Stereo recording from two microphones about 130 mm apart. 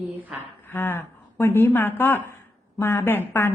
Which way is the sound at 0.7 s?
15° left (ahead or behind).